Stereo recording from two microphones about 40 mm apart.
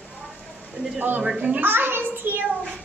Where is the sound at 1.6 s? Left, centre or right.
Right.